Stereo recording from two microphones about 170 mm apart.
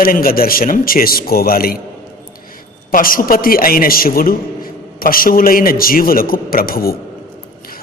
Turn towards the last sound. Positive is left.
turn(degrees=60)  # may be behind; listen again after turning